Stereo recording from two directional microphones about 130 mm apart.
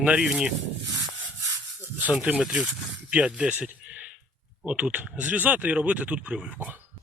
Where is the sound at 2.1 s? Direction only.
5° right (ahead or behind).